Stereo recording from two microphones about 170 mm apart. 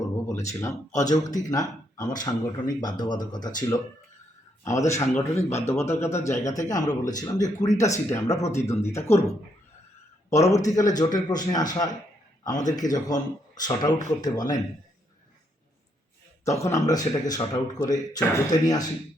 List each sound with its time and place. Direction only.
0.4 s speech: 15° left (ahead or behind)
4.6 s speech: 15° left (ahead or behind)
10.2 s speech: 20° left (ahead or behind)
12.5 s speech: 45° left (ahead or behind)
12.8 s speech: 20° left (ahead or behind)
16.4 s speech: 15° left (ahead or behind)